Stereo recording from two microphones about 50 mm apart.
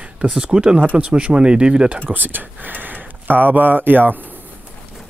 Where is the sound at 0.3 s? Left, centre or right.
Centre.